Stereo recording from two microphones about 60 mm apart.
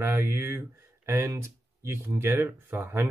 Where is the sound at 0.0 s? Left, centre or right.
Right.